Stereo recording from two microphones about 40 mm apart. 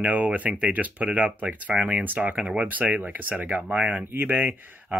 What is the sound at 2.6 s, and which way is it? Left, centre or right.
Speech, right.